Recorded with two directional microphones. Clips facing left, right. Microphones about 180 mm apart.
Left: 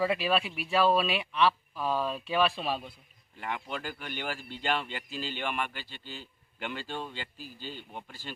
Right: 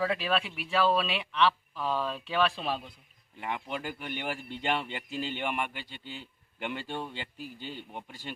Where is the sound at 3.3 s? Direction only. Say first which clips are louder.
Right 1 dB; 15° right (ahead or behind).